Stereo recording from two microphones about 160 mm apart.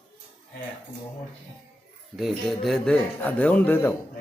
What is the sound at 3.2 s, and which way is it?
Speech, 10° left (ahead or behind).